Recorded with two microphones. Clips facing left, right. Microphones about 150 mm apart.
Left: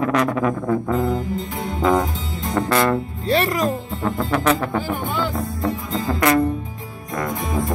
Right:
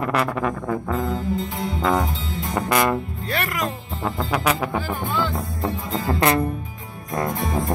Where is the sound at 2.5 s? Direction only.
15° right (ahead or behind).